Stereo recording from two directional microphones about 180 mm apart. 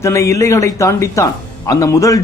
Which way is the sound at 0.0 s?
15° left (ahead or behind).